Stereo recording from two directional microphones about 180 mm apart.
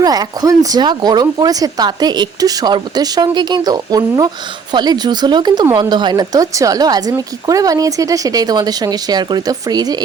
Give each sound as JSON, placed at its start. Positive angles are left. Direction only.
{"t": 0.0, "sound": "speech", "side_deg": -20}